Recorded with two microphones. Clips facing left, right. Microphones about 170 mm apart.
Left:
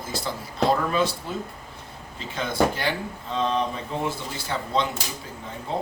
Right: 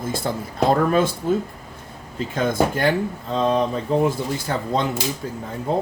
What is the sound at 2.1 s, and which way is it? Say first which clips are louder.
Speech: right 4 dB; 45° right (ahead or behind).